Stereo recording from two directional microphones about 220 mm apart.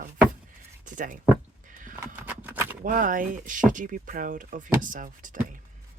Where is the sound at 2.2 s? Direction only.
10° right (ahead or behind).